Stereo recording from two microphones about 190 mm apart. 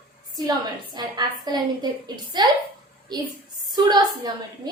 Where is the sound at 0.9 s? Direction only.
20° right (ahead or behind).